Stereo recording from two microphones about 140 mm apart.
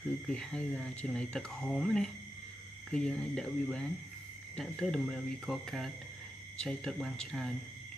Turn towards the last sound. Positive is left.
turn(degrees=5)  # may be behind; listen again after turning